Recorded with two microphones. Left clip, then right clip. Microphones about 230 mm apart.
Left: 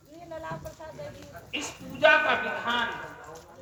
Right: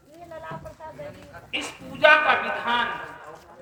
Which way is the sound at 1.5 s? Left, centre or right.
Right.